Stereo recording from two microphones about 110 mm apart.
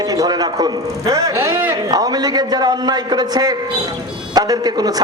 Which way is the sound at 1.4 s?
20° right (ahead or behind).